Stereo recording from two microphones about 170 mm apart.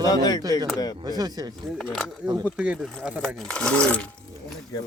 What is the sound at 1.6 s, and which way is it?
Speech, centre (ahead or behind).